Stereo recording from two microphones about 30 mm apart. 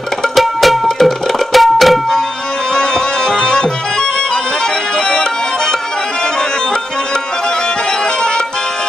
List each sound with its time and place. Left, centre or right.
0.4 s music: centre
0.8 s tabla: centre
2.7 s music: left